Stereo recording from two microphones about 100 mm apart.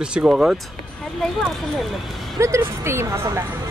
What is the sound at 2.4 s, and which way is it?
Speech, 25° right (ahead or behind).